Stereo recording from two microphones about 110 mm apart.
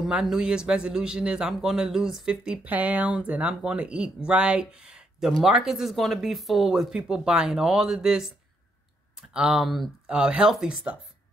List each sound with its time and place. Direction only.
0.0 s a man's voice: 5° right (ahead or behind)
9.3 s a man's voice: 5° right (ahead or behind)